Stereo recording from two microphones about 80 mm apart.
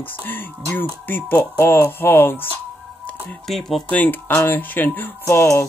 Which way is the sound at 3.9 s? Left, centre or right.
Left.